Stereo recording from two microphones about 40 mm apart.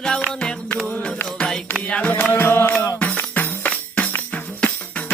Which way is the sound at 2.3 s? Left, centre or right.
Left.